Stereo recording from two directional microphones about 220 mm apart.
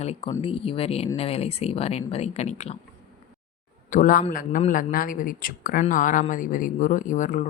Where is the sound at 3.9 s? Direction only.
40° left (ahead or behind).